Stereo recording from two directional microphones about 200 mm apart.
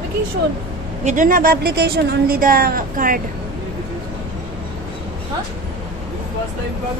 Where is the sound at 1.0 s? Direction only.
40° right (ahead or behind).